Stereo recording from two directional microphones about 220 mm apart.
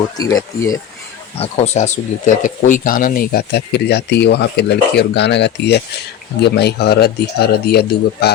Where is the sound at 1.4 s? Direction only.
30° left (ahead or behind).